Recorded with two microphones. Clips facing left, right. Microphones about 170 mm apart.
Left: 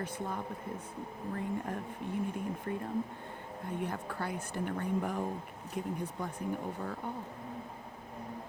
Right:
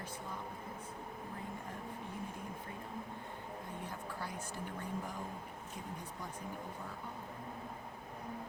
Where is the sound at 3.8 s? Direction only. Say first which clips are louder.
Left 6 dB; 65° left (ahead or behind).